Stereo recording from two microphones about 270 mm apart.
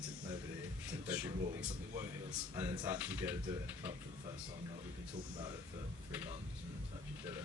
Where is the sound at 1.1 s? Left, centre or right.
Centre.